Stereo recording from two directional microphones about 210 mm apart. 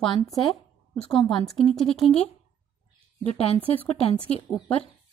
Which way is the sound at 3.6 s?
10° left (ahead or behind).